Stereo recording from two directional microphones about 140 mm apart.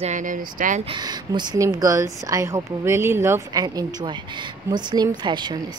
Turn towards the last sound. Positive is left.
turn(degrees=-30)  # may be behind; listen again after turning